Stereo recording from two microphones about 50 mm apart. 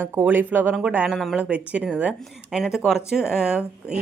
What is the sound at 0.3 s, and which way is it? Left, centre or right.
A woman's voice, right.